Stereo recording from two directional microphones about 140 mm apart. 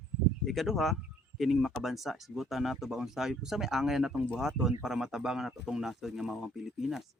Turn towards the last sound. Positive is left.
turn(degrees=0)  # may be behind; listen again after turning